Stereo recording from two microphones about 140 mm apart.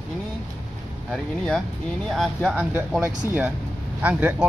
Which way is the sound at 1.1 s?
5° left (ahead or behind).